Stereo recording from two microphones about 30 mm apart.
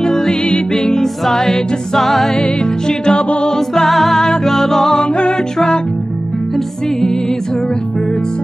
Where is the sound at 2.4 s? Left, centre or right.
Left.